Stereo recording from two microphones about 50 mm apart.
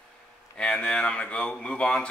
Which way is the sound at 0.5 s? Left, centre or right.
Centre.